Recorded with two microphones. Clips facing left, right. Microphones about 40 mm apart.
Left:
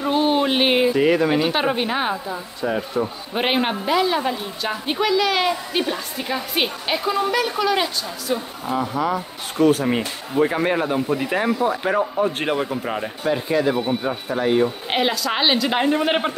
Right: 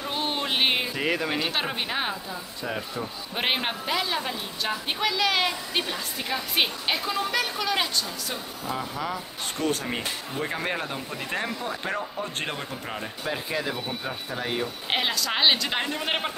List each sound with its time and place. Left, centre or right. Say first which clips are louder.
0.1 s speech: left 10 dB; centre
2.2 s speech: left 8 dB; left
3.3 s a woman's voice: left 6 dB; centre
13.8 s a woman's voice: left 9 dB; centre
15.8 s speech: left 10 dB; centre
16.1 s speech: left 7 dB; centre